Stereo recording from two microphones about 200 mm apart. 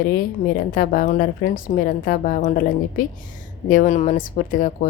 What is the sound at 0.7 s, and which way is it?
A woman's voice, 45° left (ahead or behind).